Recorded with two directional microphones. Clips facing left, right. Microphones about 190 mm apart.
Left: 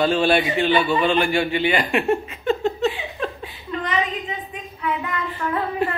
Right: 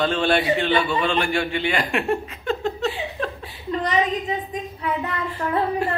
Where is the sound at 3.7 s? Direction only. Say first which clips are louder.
Right 3 dB; 40° right (ahead or behind).